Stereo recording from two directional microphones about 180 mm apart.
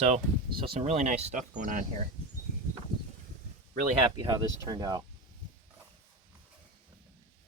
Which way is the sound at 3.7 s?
25° right (ahead or behind).